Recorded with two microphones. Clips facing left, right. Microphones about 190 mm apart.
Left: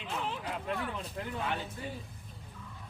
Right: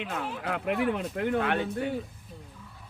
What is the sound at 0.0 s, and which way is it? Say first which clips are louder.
Speech: right 4 dB; 70° right (ahead or behind).